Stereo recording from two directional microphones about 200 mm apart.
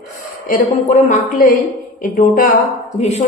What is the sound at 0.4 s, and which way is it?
Speech, 40° left (ahead or behind).